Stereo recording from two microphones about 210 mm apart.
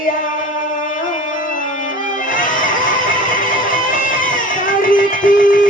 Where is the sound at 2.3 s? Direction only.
40° left (ahead or behind).